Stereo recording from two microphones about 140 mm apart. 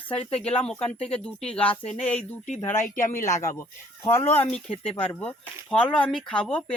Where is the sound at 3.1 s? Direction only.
60° left (ahead or behind).